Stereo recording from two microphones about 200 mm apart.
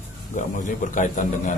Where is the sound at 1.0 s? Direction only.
40° left (ahead or behind).